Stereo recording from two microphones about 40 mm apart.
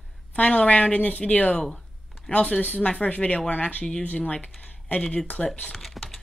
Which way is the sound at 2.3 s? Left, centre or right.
Left.